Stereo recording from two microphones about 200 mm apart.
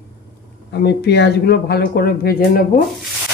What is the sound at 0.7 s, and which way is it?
Speech, 55° left (ahead or behind).